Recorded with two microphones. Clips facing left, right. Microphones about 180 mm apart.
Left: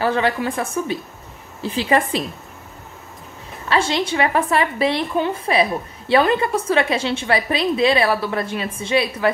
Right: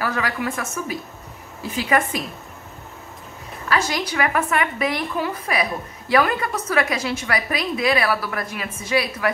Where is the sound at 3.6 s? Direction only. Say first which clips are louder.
Left 3 dB; 25° left (ahead or behind).